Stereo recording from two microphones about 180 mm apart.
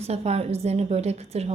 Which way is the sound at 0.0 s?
35° right (ahead or behind).